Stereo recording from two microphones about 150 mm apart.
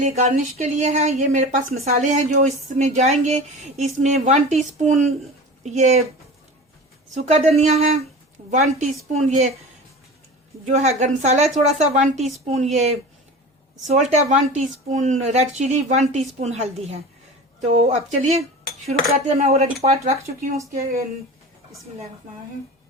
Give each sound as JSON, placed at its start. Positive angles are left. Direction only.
{"t": 0.0, "sound": "speech", "side_deg": -55}
{"t": 7.1, "sound": "speech", "side_deg": -50}
{"t": 10.7, "sound": "speech", "side_deg": -50}